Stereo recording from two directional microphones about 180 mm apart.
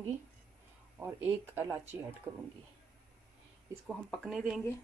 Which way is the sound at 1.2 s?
15° right (ahead or behind).